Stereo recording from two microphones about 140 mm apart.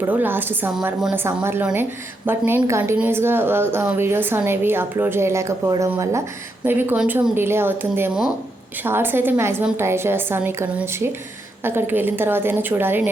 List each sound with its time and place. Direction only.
0.0 s a woman's voice: 15° right (ahead or behind)